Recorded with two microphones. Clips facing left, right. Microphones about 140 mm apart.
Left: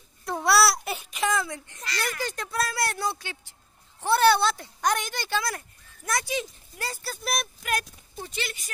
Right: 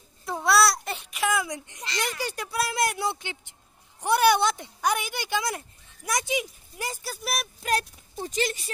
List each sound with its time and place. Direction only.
0.2 s babbling: centre (ahead or behind)
2.7 s speech: 20° right (ahead or behind)
7.6 s speech: 35° right (ahead or behind)